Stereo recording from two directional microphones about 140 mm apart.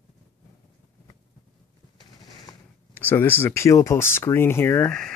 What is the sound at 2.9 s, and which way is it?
Speech, 15° left (ahead or behind).